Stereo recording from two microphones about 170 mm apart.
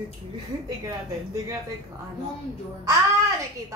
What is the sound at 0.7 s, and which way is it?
Speech, 20° right (ahead or behind).